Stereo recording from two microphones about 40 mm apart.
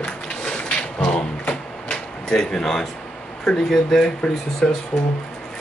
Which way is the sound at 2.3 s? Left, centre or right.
Centre.